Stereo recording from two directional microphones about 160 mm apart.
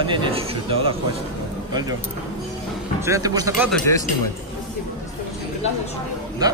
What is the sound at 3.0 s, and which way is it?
Speech, 20° right (ahead or behind).